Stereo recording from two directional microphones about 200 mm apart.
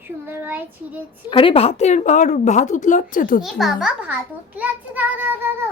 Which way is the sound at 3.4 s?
Centre (ahead or behind).